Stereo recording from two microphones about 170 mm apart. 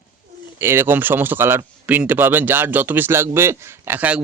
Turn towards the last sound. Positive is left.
turn(degrees=-10)  # may be behind; listen again after turning